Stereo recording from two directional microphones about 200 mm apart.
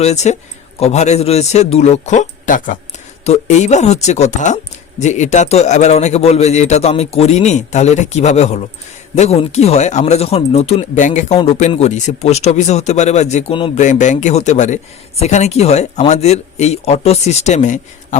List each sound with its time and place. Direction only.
0.0 s speech: 35° left (ahead or behind)